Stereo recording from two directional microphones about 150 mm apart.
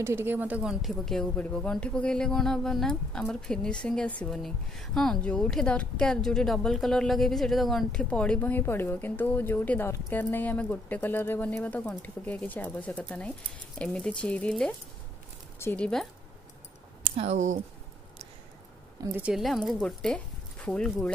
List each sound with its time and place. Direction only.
0.0 s a woman's voice: 15° right (ahead or behind); by 16.1 s 5° left (ahead or behind)
17.0 s speech: 45° right (ahead or behind)
19.1 s speech: 5° right (ahead or behind)